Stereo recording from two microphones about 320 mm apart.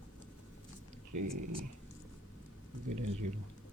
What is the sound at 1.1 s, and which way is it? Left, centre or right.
Speech, right.